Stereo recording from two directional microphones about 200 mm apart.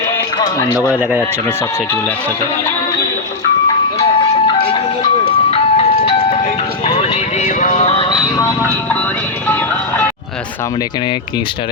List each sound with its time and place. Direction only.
4.4 s music: 25° left (ahead or behind)
5.5 s ice cream truck: 30° left (ahead or behind)
6.8 s vehicle: 30° left (ahead or behind)
8.4 s vehicle: 10° left (ahead or behind)